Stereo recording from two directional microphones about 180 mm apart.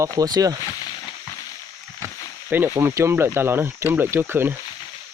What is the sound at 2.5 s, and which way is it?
Speech, 15° right (ahead or behind).